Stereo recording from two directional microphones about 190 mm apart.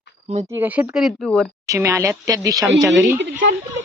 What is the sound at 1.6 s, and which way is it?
Speech, 15° right (ahead or behind).